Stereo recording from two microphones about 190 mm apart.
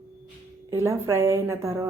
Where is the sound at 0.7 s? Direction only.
15° right (ahead or behind).